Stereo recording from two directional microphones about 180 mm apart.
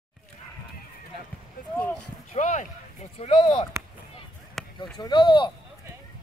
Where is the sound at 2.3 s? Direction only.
45° left (ahead or behind); by 3.7 s 30° left (ahead or behind).